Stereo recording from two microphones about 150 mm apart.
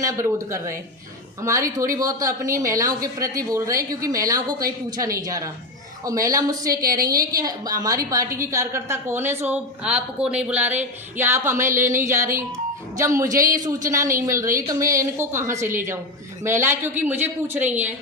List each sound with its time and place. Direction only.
0.0 s a woman's voice: 20° right (ahead or behind)